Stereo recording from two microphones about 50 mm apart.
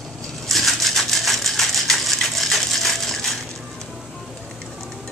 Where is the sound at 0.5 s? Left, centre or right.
Centre.